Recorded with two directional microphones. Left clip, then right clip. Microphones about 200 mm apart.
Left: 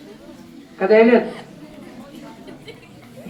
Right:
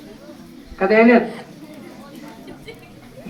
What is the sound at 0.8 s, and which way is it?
Speech, 15° right (ahead or behind).